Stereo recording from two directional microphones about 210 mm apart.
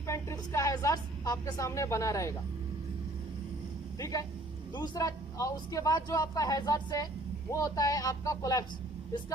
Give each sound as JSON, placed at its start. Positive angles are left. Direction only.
{"t": 0.1, "sound": "a woman's voice", "side_deg": 15}
{"t": 3.9, "sound": "speech", "side_deg": 15}